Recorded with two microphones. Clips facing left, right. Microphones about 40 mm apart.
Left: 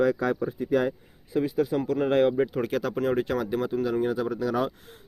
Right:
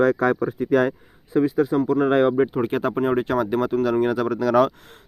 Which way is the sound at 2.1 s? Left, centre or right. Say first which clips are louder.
Right 1 dB; right.